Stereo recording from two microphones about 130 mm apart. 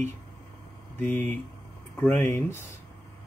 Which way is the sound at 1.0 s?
15° left (ahead or behind).